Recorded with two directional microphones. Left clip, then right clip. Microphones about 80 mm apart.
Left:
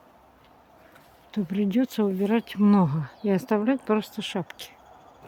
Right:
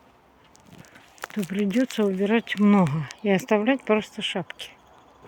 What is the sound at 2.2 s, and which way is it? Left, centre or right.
Speech, centre.